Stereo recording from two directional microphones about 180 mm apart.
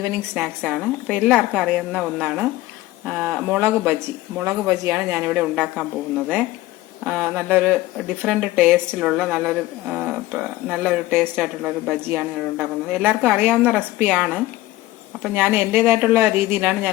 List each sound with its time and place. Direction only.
0.4 s speech: 5° right (ahead or behind)